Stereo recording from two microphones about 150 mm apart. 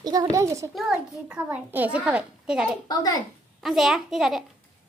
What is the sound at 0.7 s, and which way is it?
A child's voice, centre (ahead or behind).